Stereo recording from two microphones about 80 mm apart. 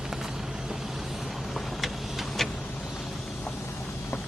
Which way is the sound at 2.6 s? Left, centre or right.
Centre.